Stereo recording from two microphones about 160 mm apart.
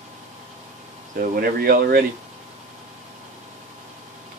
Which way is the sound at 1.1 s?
65° right (ahead or behind).